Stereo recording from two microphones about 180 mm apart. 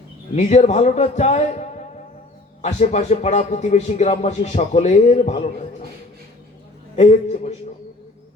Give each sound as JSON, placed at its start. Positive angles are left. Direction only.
{"t": 0.3, "sound": "a man's voice", "side_deg": 40}
{"t": 6.9, "sound": "a man's voice", "side_deg": 40}